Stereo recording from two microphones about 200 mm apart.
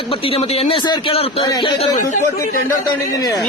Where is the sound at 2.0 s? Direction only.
40° left (ahead or behind).